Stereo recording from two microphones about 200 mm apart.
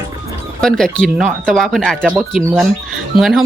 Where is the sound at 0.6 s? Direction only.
5° left (ahead or behind).